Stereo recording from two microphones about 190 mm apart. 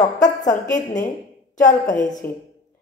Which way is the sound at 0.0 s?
40° left (ahead or behind).